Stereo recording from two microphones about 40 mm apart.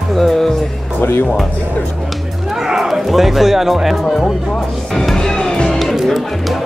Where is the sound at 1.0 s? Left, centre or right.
Left.